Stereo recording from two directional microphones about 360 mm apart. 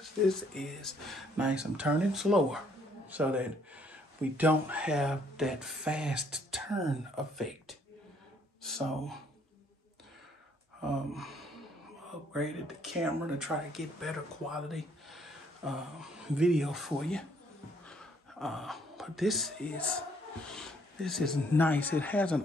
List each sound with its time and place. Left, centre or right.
0.0 s speech: centre
11.1 s gasp: centre
12.3 s speech: centre